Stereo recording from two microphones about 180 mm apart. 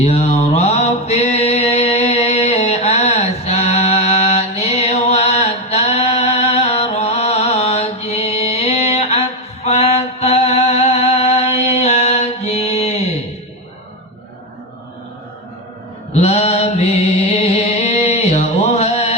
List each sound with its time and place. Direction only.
0.0 s mantra: 35° left (ahead or behind)
16.2 s music: 35° left (ahead or behind)